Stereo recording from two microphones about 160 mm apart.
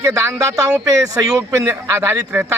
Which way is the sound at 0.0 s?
20° right (ahead or behind).